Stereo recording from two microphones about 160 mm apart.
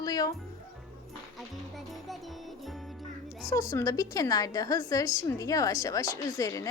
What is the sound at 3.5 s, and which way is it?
A woman's voice, 20° left (ahead or behind).